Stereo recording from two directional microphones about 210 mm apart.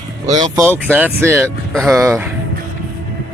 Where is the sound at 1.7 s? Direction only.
Centre (ahead or behind).